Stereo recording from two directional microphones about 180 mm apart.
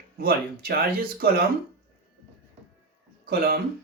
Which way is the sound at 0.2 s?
60° right (ahead or behind).